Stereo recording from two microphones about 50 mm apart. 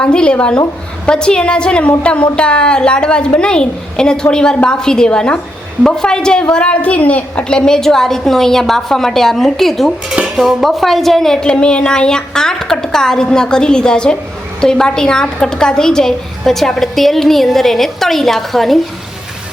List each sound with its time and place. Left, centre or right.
0.0 s a woman's voice: centre
10.1 s dishes: centre
10.6 s a woman's voice: centre
11.4 s a woman's voice: centre